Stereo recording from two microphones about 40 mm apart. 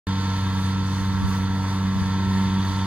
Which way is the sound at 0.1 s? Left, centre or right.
Right.